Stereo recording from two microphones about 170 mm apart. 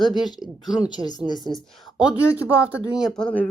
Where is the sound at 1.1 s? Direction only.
25° left (ahead or behind).